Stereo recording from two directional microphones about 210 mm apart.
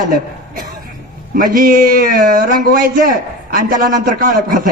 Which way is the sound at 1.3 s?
40° right (ahead or behind).